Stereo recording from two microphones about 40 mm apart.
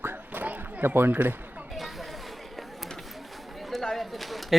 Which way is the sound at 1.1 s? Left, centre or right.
Right.